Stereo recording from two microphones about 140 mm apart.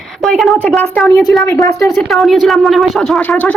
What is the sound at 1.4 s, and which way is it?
Speech, 20° left (ahead or behind).